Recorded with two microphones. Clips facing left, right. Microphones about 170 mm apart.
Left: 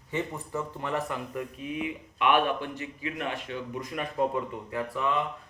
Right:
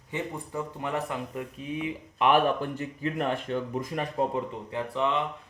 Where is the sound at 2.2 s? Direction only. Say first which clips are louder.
Right 2 dB; 40° right (ahead or behind).